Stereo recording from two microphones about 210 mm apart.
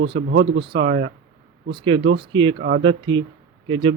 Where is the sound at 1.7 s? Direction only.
20° right (ahead or behind).